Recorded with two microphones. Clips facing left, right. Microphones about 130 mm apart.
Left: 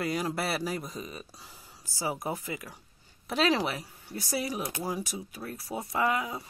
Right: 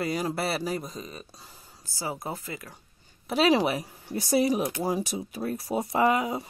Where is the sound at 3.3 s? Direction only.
10° right (ahead or behind); by 6.4 s 25° right (ahead or behind).